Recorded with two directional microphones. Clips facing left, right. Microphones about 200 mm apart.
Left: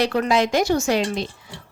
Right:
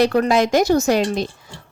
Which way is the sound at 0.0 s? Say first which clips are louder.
Right 4 dB; 45° right (ahead or behind).